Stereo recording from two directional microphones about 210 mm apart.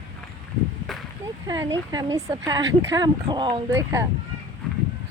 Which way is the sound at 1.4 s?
15° right (ahead or behind).